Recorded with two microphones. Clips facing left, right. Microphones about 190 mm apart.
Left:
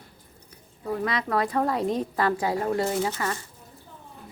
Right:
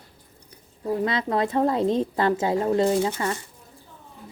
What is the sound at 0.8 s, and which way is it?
A woman's voice, 25° right (ahead or behind).